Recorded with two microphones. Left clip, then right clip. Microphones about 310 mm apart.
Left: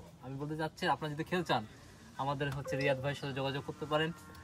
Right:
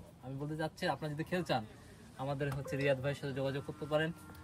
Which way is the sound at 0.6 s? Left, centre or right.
Centre.